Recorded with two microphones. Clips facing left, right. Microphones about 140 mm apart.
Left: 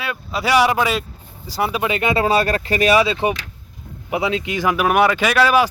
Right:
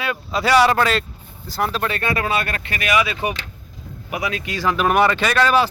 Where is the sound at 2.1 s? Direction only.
35° left (ahead or behind); by 5.6 s 10° left (ahead or behind).